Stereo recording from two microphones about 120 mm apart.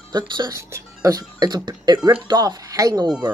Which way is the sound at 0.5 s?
25° right (ahead or behind).